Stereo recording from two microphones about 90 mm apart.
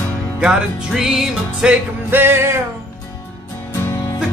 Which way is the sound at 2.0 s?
25° right (ahead or behind).